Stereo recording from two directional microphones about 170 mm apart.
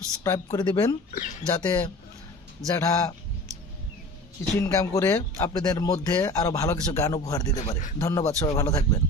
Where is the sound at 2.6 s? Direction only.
20° left (ahead or behind).